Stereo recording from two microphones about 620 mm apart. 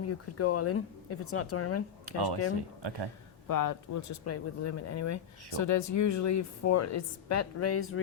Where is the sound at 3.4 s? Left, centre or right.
Left.